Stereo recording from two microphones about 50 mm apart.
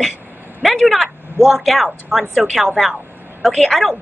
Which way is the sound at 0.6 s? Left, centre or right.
Centre.